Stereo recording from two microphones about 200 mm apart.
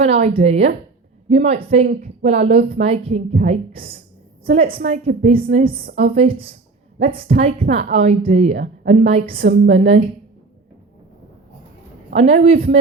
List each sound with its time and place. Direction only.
0.0 s a woman's voice: 30° right (ahead or behind)
5.7 s a woman's voice: 45° right (ahead or behind)
6.1 s a woman's voice: 30° right (ahead or behind)
9.3 s a woman's voice: 45° right (ahead or behind)
9.6 s speech: 30° right (ahead or behind)
12.1 s speech: 30° right (ahead or behind)